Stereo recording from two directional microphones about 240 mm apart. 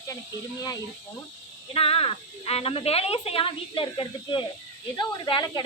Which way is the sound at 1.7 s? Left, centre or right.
Left.